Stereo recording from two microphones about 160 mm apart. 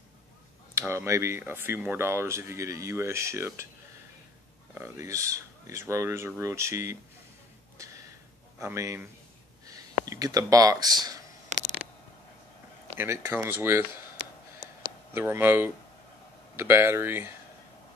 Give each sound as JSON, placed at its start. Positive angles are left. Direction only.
{"t": 0.7, "sound": "speech", "side_deg": -15}
{"t": 4.7, "sound": "speech", "side_deg": -20}
{"t": 7.7, "sound": "a sound", "side_deg": -20}
{"t": 8.5, "sound": "speech", "side_deg": -20}
{"t": 12.9, "sound": "speech", "side_deg": -15}
{"t": 14.6, "sound": "a sound", "side_deg": -25}
{"t": 15.1, "sound": "speech", "side_deg": -15}